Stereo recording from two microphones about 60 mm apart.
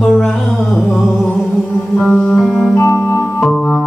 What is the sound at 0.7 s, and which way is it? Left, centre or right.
Music, centre.